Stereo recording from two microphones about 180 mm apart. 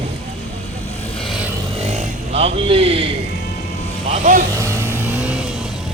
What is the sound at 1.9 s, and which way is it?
Vehicle, 35° right (ahead or behind).